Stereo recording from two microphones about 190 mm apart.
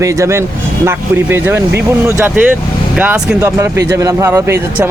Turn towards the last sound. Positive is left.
turn(degrees=-15)  # may be behind; listen again after turning